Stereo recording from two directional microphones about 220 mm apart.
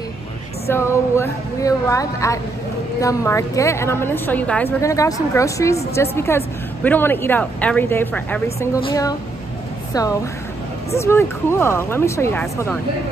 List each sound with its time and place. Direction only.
0.7 s a woman's voice: 10° left (ahead or behind)